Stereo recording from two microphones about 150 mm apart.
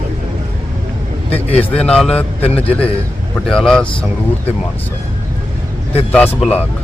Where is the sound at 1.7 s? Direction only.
5° left (ahead or behind).